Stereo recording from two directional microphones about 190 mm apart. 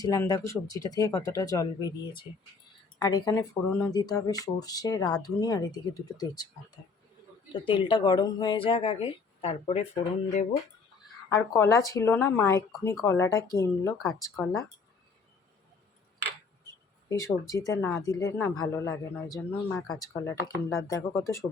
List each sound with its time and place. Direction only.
0.0 s speech: 20° left (ahead or behind)
7.5 s speech: 25° left (ahead or behind)
11.3 s speech: 15° left (ahead or behind)
17.1 s speech: 15° left (ahead or behind)